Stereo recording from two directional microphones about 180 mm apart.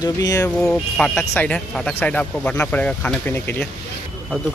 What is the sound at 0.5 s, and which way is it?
Speech, 5° left (ahead or behind).